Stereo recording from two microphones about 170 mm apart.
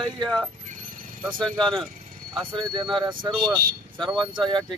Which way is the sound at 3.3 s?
Centre (ahead or behind).